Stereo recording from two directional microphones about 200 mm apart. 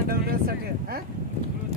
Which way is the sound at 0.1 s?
50° right (ahead or behind).